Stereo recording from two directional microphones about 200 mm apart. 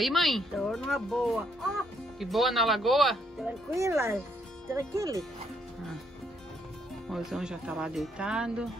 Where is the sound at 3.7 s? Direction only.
15° right (ahead or behind).